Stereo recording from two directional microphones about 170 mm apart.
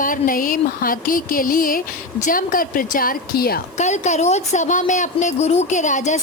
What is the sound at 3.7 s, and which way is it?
A woman's voice, 45° left (ahead or behind).